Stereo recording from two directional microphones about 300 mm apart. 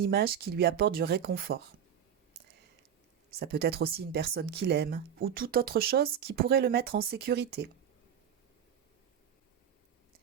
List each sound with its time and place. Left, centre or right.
0.0 s speech: right
3.3 s speech: right